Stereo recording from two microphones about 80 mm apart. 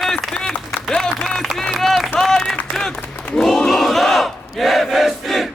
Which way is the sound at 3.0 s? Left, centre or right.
Centre.